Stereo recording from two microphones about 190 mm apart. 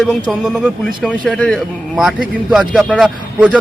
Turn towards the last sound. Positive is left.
turn(degrees=-5)  # may be behind; listen again after turning